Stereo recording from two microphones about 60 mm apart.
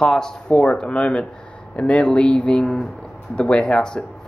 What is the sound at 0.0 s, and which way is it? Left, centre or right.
Speech, centre.